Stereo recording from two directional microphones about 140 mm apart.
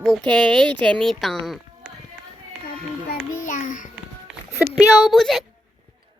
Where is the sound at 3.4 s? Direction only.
70° left (ahead or behind).